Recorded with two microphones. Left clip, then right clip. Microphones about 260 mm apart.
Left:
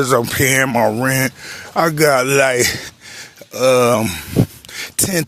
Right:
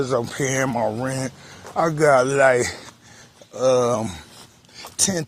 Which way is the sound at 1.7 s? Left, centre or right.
Left.